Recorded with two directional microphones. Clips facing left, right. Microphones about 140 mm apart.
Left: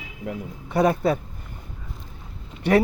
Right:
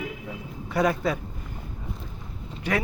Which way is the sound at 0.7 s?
30° left (ahead or behind).